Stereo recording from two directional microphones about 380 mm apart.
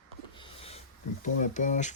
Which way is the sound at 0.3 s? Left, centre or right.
Centre.